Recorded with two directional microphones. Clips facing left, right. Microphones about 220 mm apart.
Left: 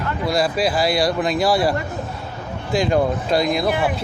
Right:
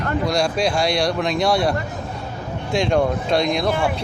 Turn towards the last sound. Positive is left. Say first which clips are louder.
# even
turn(degrees=20)  # may be behind; listen again after turning